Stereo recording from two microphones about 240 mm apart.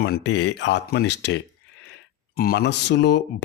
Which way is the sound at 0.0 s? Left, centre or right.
Left.